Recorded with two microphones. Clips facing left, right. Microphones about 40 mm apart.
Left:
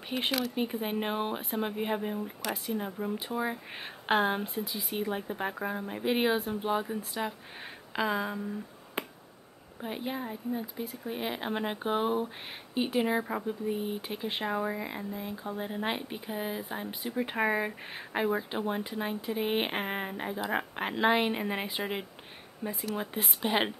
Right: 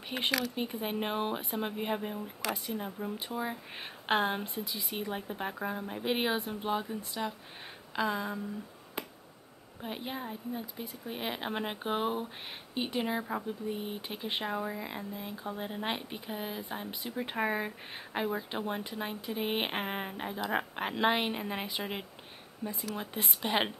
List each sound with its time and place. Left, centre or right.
0.2 s speech: centre
9.8 s speech: centre
14.5 s speech: centre
14.9 s speech: centre
22.6 s speech: left
22.9 s speech: centre